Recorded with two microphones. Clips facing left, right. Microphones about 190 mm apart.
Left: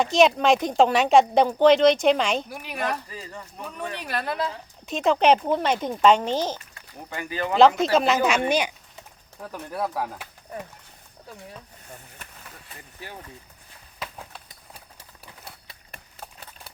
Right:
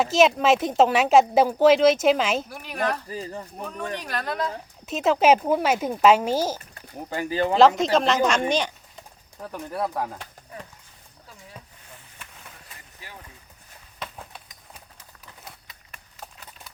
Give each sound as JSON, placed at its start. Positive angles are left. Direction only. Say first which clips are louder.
{"t": 0.0, "sound": "a woman's voice", "louder": "even", "side_deg": 0}
{"t": 3.1, "sound": "speech", "louder": "right 6 dB", "side_deg": -35}
{"t": 4.0, "sound": "a woman's voice", "louder": "left 3 dB", "side_deg": 5}
{"t": 4.9, "sound": "speech", "louder": "right 1 dB", "side_deg": -5}
{"t": 6.7, "sound": "speech", "louder": "right 5 dB", "side_deg": -35}
{"t": 7.9, "sound": "a woman's voice", "louder": "even", "side_deg": 5}
{"t": 8.4, "sound": "a sound", "louder": "left 1 dB", "side_deg": 10}
{"t": 9.4, "sound": "a woman's voice", "louder": "right 1 dB", "side_deg": 0}
{"t": 14.0, "sound": "a sound", "louder": "even", "side_deg": 0}
{"t": 15.6, "sound": "a sound", "louder": "left 3 dB", "side_deg": 30}